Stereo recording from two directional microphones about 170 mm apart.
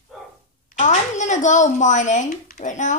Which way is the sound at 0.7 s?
45° left (ahead or behind).